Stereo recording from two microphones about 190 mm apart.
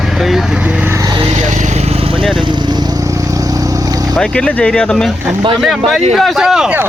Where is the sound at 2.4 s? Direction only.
25° right (ahead or behind).